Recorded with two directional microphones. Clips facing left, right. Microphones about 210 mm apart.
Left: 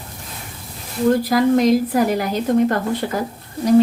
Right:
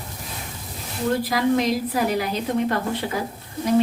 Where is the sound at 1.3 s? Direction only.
50° left (ahead or behind).